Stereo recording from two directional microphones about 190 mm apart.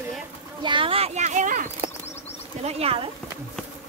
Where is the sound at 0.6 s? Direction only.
25° right (ahead or behind).